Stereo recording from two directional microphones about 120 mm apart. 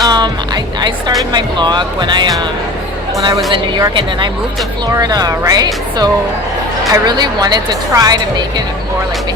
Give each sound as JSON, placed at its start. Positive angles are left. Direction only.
{"t": 0.0, "sound": "music", "side_deg": -35}
{"t": 1.3, "sound": "a woman's voice", "side_deg": -40}
{"t": 4.9, "sound": "speech", "side_deg": -35}